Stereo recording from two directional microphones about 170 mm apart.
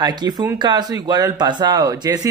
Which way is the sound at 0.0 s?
25° right (ahead or behind).